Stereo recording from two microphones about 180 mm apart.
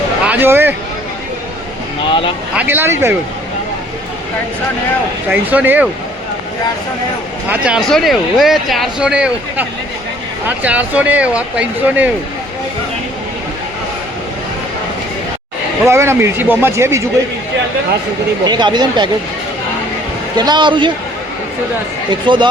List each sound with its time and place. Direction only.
0.3 s speech: 10° right (ahead or behind)
2.6 s speech: 10° right (ahead or behind)
5.3 s speech: 10° right (ahead or behind)
7.4 s speech: 5° right (ahead or behind)
15.9 s speech: 15° right (ahead or behind)
18.4 s speech: 25° right (ahead or behind)
20.3 s speech: 25° right (ahead or behind)
22.1 s speech: 25° right (ahead or behind)